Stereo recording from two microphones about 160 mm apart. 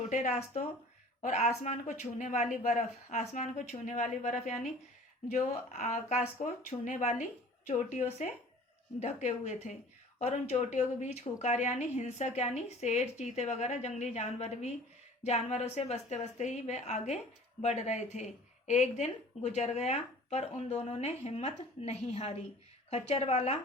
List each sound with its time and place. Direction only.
0.1 s a woman's voice: 45° left (ahead or behind)
9.2 s a woman's voice: 45° left (ahead or behind)